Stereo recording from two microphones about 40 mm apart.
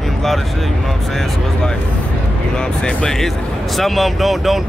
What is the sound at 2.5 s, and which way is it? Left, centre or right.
Speech, left.